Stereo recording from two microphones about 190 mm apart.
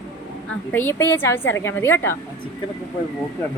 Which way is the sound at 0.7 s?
10° left (ahead or behind).